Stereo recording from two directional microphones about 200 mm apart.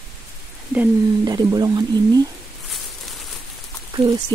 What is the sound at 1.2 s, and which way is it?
Speech, 20° right (ahead or behind).